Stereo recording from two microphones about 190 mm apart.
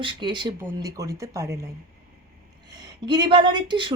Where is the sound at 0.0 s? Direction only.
25° right (ahead or behind).